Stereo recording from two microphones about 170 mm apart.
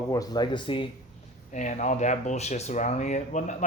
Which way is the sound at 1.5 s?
45° left (ahead or behind).